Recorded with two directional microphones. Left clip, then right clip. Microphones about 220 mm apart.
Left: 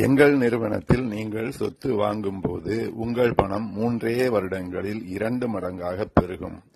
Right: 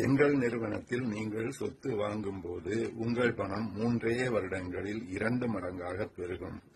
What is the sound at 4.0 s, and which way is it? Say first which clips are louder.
A man's voice: left 9 dB; 40° left (ahead or behind).